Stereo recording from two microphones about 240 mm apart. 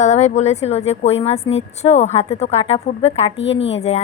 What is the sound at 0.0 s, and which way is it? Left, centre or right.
Speech, left.